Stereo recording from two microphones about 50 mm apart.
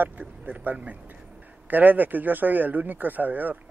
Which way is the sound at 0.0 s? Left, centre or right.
Right.